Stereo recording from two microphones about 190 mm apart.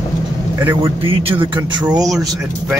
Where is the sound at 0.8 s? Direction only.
30° right (ahead or behind).